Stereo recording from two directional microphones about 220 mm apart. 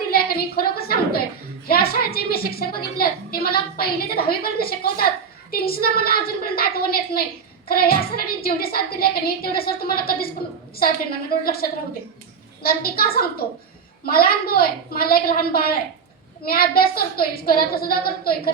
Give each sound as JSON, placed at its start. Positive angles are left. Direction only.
{"t": 0.1, "sound": "a sound", "side_deg": 45}
{"t": 1.6, "sound": "a woman's voice", "side_deg": 45}
{"t": 11.3, "sound": "a woman's voice", "side_deg": 40}